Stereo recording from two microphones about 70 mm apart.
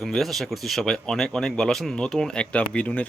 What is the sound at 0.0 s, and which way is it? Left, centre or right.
A man's voice, centre.